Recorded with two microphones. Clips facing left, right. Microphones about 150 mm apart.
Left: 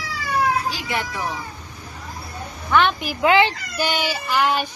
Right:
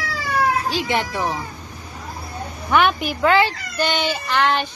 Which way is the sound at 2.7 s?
15° right (ahead or behind).